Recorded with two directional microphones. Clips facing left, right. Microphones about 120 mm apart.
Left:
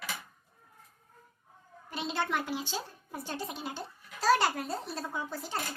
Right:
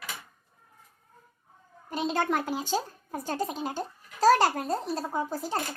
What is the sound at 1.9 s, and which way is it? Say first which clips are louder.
A woman's voice: right 5 dB; 45° right (ahead or behind).